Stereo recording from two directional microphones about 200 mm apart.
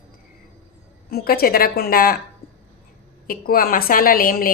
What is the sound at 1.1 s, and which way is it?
A woman's voice, 50° left (ahead or behind).